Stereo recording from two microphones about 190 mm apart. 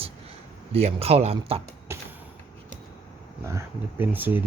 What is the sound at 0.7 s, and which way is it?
Speech, 30° right (ahead or behind).